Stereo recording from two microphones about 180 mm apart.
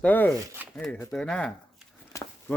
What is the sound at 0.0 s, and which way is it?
A man's voice, 10° left (ahead or behind).